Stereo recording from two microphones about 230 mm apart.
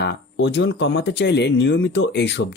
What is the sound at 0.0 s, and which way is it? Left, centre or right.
Speech, left.